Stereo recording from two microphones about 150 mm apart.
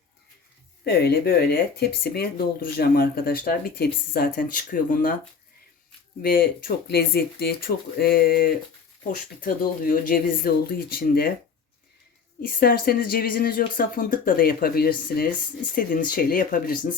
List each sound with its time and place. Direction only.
0.9 s speech: 90° left; by 5.1 s 60° left (ahead or behind)
6.2 s speech: 75° left (ahead or behind)
9.0 s speech: 65° left (ahead or behind)
12.5 s speech: 80° left
15.7 s speech: 65° left (ahead or behind)